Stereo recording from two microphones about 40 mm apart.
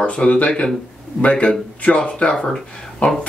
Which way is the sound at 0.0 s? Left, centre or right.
Left.